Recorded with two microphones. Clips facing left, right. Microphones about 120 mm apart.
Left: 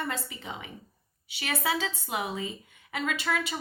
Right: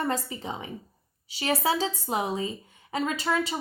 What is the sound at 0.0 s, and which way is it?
A woman's voice, 35° right (ahead or behind).